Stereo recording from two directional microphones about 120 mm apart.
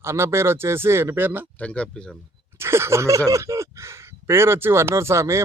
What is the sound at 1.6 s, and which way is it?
Speech, 10° left (ahead or behind).